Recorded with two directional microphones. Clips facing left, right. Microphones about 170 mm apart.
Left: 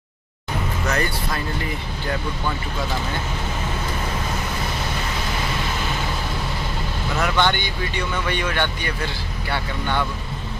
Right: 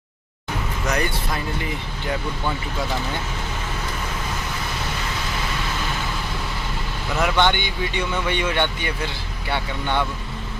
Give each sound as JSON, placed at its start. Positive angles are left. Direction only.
{"t": 0.8, "sound": "speech", "side_deg": -15}
{"t": 7.2, "sound": "speech", "side_deg": -20}